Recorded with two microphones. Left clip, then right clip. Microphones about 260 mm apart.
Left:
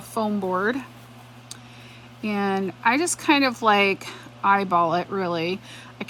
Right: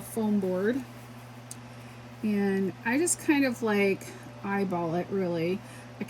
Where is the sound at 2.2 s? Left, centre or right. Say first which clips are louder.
Left 5 dB; left.